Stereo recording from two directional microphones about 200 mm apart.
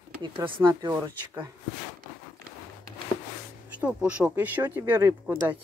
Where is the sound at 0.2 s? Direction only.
15° right (ahead or behind).